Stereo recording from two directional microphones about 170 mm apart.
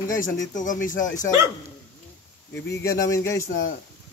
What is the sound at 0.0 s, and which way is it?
Speech, 50° left (ahead or behind).